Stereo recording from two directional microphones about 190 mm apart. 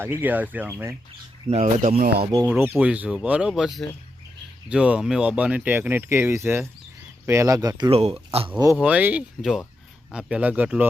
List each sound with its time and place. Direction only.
0.0 s speech: 10° right (ahead or behind)
1.5 s speech: 35° right (ahead or behind); by 2.2 s 50° right (ahead or behind)
2.5 s speech: 5° right (ahead or behind); by 8.1 s 30° right (ahead or behind)
8.5 s speech: 15° right (ahead or behind)